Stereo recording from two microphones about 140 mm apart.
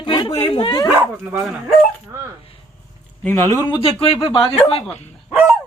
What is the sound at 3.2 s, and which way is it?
Speech, 15° left (ahead or behind).